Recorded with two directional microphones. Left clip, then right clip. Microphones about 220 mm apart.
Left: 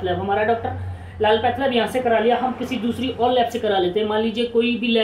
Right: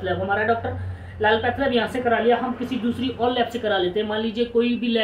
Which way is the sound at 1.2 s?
15° left (ahead or behind).